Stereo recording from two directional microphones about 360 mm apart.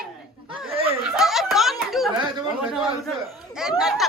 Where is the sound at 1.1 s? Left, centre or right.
Centre.